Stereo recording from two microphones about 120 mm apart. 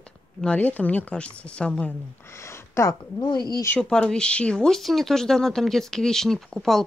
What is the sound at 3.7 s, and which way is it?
Speech, 5° left (ahead or behind).